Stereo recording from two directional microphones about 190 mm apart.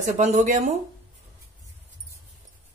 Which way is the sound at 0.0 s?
40° right (ahead or behind).